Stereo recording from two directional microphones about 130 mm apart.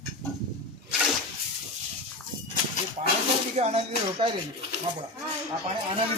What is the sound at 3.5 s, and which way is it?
Speech, 55° right (ahead or behind).